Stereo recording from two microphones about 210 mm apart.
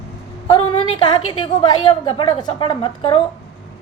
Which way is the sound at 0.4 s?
30° left (ahead or behind).